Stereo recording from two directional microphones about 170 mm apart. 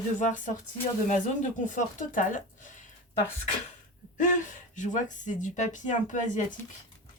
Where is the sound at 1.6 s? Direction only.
50° left (ahead or behind).